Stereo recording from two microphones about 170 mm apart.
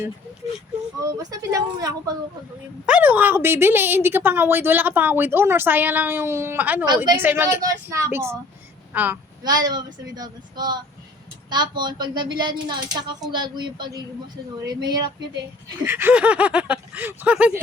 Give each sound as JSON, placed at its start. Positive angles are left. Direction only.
{"t": 0.9, "sound": "speech", "side_deg": -20}
{"t": 2.8, "sound": "a woman's voice", "side_deg": -10}
{"t": 6.8, "sound": "speech", "side_deg": -25}
{"t": 7.2, "sound": "a woman's voice", "side_deg": -15}
{"t": 9.4, "sound": "speech", "side_deg": -25}
{"t": 15.9, "sound": "a woman's voice", "side_deg": -10}